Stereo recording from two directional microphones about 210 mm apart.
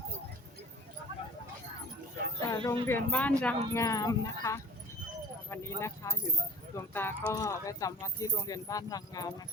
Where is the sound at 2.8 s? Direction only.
10° left (ahead or behind).